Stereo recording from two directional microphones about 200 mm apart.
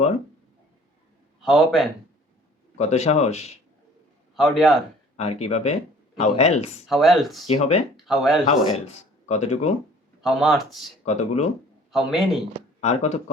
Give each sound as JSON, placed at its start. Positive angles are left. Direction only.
{"t": 1.4, "sound": "a man's voice", "side_deg": 0}
{"t": 2.7, "sound": "speech", "side_deg": 35}
{"t": 4.4, "sound": "speech", "side_deg": 0}
{"t": 5.1, "sound": "speech", "side_deg": 30}
{"t": 6.8, "sound": "speech", "side_deg": 0}
{"t": 7.4, "sound": "speech", "side_deg": 30}
{"t": 7.9, "sound": "speech", "side_deg": 0}
{"t": 9.2, "sound": "speech", "side_deg": 35}
{"t": 10.2, "sound": "speech", "side_deg": 0}
{"t": 11.0, "sound": "speech", "side_deg": 35}
{"t": 11.9, "sound": "speech", "side_deg": 0}
{"t": 12.8, "sound": "speech", "side_deg": 35}